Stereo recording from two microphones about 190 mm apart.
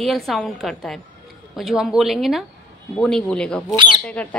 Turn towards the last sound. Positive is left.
turn(degrees=5)  # may be behind; listen again after turning